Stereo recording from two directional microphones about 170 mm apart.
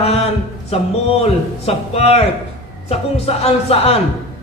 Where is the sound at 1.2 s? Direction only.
35° left (ahead or behind).